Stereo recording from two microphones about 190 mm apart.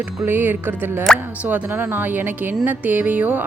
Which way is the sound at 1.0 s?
Centre (ahead or behind).